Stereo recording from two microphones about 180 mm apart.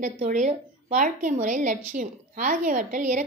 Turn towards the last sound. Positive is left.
turn(degrees=-45)  # may be behind; listen again after turning